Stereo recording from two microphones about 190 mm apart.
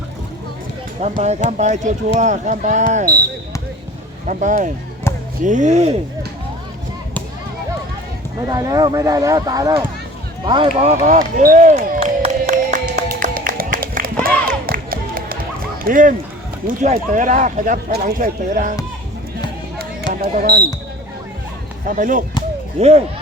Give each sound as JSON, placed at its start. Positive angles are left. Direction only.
{"t": 1.0, "sound": "speech", "side_deg": -35}
{"t": 4.3, "sound": "speech", "side_deg": -40}
{"t": 5.1, "sound": "basketball bounce", "side_deg": 15}
{"t": 5.4, "sound": "speech", "side_deg": -40}
{"t": 8.4, "sound": "speech", "side_deg": -20}
{"t": 10.8, "sound": "basketball bounce", "side_deg": -40}
{"t": 14.7, "sound": "music", "side_deg": -50}
{"t": 15.8, "sound": "speech", "side_deg": -45}
{"t": 20.1, "sound": "speech", "side_deg": -45}
{"t": 21.8, "sound": "speech", "side_deg": -45}